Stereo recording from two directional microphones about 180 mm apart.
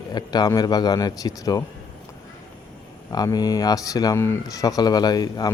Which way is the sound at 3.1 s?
20° left (ahead or behind).